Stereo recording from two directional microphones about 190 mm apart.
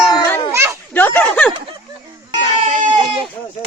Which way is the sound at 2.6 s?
40° right (ahead or behind).